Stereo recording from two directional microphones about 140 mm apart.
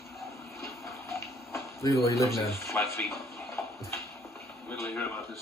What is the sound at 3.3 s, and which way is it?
Bathtub, 20° left (ahead or behind).